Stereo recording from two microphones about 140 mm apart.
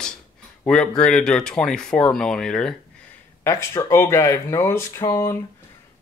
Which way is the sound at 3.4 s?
20° left (ahead or behind).